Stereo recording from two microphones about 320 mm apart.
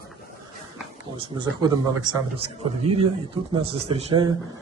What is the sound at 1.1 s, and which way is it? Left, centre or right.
A man's voice, centre.